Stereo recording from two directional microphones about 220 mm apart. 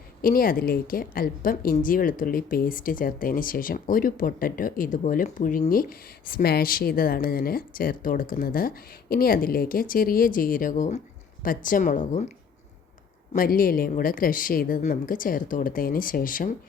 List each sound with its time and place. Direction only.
0.2 s a woman's voice: 40° left (ahead or behind)
13.3 s a woman's voice: 40° left (ahead or behind)